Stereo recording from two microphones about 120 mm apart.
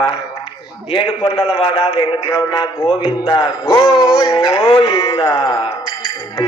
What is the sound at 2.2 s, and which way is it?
Speech, 25° left (ahead or behind).